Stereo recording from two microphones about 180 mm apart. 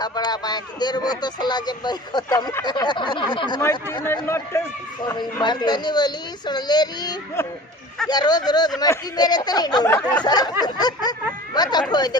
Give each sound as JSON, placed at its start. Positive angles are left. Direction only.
{"t": 0.0, "sound": "speech", "side_deg": 25}